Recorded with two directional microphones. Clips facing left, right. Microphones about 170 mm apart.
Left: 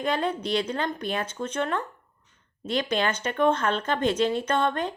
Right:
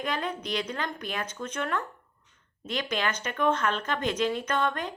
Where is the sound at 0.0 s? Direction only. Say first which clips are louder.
Left 5 dB; 30° left (ahead or behind).